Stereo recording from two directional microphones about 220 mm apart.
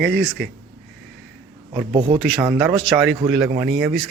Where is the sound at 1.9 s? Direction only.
20° right (ahead or behind).